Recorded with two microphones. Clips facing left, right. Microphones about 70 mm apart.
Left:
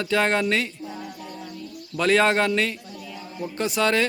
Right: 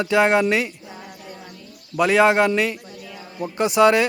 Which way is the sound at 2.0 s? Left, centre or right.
Centre.